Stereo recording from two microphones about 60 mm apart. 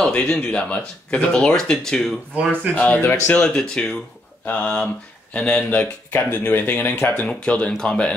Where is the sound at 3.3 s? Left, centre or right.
Centre.